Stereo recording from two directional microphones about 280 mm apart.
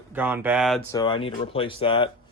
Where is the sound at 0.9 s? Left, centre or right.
Centre.